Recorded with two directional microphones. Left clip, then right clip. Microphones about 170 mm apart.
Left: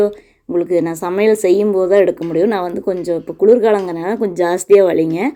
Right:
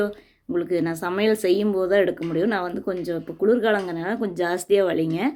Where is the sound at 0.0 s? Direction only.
10° left (ahead or behind).